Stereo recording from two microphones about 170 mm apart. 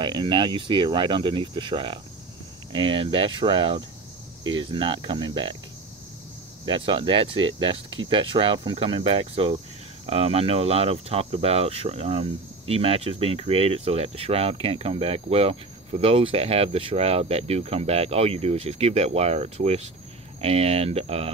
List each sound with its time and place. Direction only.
0.0 s speech: 30° right (ahead or behind)
2.7 s cricket: 30° right (ahead or behind)
4.4 s speech: 30° right (ahead or behind)
6.6 s cricket: 30° right (ahead or behind)
20.3 s speech: 35° right (ahead or behind)